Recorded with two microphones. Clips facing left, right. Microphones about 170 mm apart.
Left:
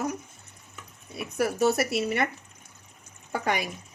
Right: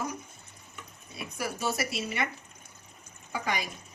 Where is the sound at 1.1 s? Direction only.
65° left (ahead or behind).